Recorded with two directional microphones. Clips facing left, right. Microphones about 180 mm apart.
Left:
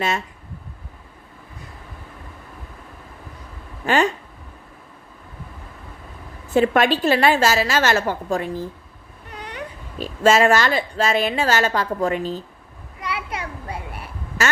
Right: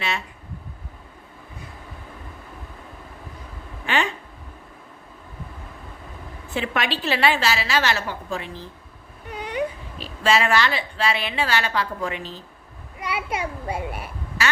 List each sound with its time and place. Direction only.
3.8 s a woman's voice: 40° left (ahead or behind)
6.5 s a woman's voice: 45° left (ahead or behind)
10.0 s a woman's voice: 45° left (ahead or behind)
13.0 s children playing: 15° right (ahead or behind)
14.4 s quack: 45° left (ahead or behind)